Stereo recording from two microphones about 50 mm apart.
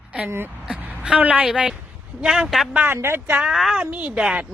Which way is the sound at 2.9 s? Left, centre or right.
Right.